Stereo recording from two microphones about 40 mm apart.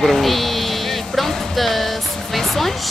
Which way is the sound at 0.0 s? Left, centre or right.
Centre.